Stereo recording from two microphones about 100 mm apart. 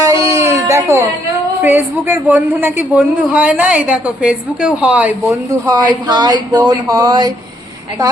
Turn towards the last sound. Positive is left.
turn(degrees=-40)  # may be behind; listen again after turning